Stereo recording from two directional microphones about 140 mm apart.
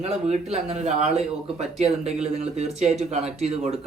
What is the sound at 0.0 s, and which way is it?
A man's voice, 50° right (ahead or behind).